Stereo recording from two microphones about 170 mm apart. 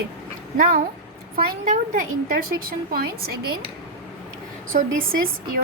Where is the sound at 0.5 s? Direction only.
55° right (ahead or behind).